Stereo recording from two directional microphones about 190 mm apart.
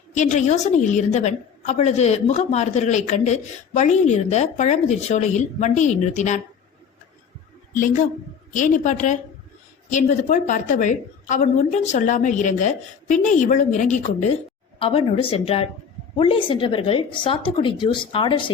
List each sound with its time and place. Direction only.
0.1 s a woman's voice: 35° left (ahead or behind)
7.7 s a woman's voice: 45° left (ahead or behind); by 18.5 s 25° left (ahead or behind)